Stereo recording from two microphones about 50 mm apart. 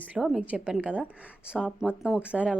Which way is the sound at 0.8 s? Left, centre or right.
Right.